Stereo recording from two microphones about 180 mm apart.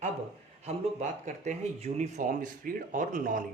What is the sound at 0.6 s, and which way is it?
A man's voice, 40° right (ahead or behind).